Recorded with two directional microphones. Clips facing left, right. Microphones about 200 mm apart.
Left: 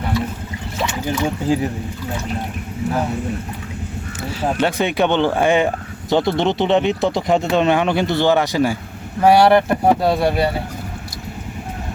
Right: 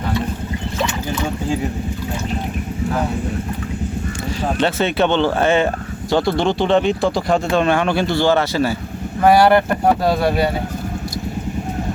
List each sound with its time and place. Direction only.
4.4 s speech: 10° left (ahead or behind)
9.2 s speech: centre (ahead or behind)